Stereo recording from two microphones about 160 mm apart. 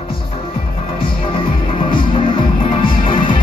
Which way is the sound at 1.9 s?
30° left (ahead or behind).